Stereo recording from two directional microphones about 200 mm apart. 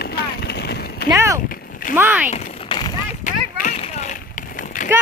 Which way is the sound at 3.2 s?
40° left (ahead or behind).